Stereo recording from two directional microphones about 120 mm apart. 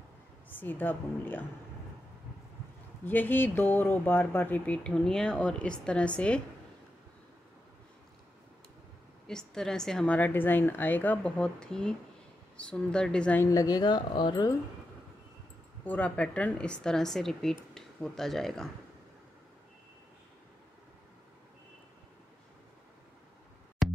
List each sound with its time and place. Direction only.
0.5 s speech: 15° left (ahead or behind)
3.1 s speech: 15° left (ahead or behind)
9.3 s speech: 5° left (ahead or behind)
13.4 s speech: 30° left (ahead or behind)
15.8 s speech: 15° left (ahead or behind)
23.8 s music: centre (ahead or behind)